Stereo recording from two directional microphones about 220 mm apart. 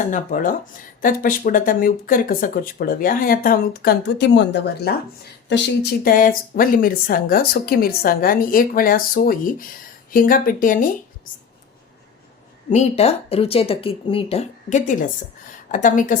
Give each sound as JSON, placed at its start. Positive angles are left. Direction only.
{"t": 0.0, "sound": "speech", "side_deg": 35}
{"t": 12.7, "sound": "speech", "side_deg": 30}